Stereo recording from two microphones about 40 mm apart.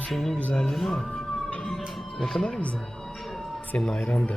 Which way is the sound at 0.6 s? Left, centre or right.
Centre.